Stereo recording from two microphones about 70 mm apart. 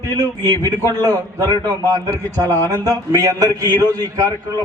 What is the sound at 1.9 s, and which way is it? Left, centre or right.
A man's voice, right.